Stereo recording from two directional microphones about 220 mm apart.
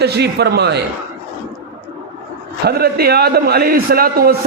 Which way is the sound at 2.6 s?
45° right (ahead or behind).